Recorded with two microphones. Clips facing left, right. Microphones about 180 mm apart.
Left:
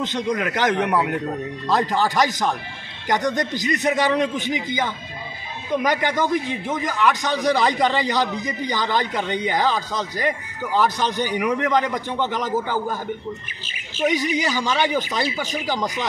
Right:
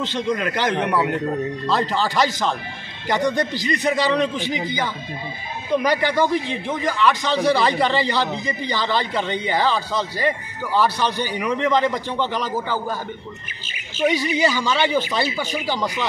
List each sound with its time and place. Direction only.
0.0 s a man's voice: 20° left (ahead or behind)
6.4 s a man's voice: 20° right (ahead or behind)
6.7 s a man's voice: 15° left (ahead or behind)
14.0 s a man's voice: 15° left (ahead or behind)